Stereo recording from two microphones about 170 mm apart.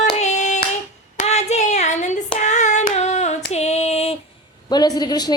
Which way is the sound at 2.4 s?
45° left (ahead or behind).